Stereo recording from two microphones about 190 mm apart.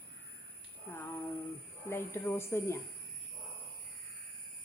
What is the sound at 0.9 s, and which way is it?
Speech, 10° left (ahead or behind).